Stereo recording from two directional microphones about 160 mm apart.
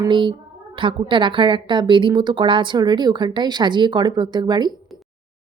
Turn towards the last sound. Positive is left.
turn(degrees=-25)  # may be behind; listen again after turning